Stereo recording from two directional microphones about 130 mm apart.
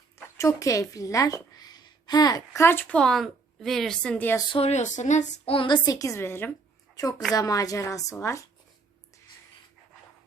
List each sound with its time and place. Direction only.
0.3 s a woman's voice: 25° left (ahead or behind)
3.0 s a woman's voice: centre (ahead or behind)
4.5 s speech: 55° left (ahead or behind)
5.5 s a woman's voice: 40° left (ahead or behind); by 6.5 s 20° left (ahead or behind)
6.9 s a woman's voice: 30° left (ahead or behind)